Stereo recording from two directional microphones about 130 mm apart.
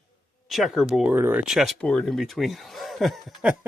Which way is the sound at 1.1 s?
15° right (ahead or behind).